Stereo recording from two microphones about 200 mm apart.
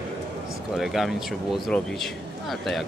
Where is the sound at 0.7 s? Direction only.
Centre (ahead or behind).